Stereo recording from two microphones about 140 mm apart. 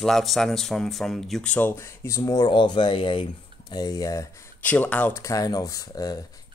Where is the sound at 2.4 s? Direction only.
35° left (ahead or behind).